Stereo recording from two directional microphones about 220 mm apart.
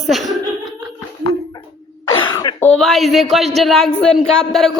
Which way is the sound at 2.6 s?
5° left (ahead or behind).